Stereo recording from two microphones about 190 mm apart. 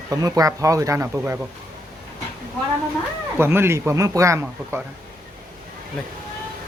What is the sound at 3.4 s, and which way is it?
Speech, 10° right (ahead or behind).